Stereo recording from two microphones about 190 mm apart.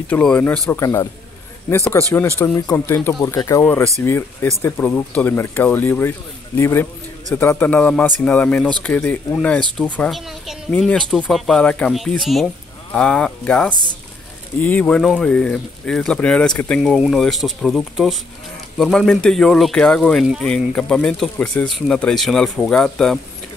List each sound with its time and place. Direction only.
0.1 s speech: 5° left (ahead or behind)